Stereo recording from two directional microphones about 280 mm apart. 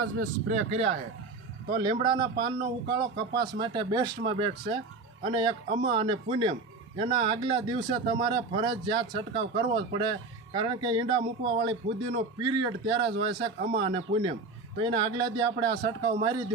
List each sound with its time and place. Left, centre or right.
0.2 s speech: right
1.7 s a man's voice: centre